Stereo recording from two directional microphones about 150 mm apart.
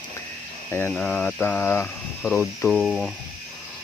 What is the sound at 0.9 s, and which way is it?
Speech, 5° left (ahead or behind).